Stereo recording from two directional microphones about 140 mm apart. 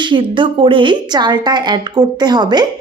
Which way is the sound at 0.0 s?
35° right (ahead or behind).